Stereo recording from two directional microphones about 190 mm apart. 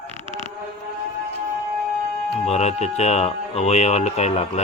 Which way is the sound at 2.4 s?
35° left (ahead or behind).